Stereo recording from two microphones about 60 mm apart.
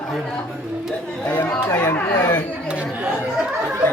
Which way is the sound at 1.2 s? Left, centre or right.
Left.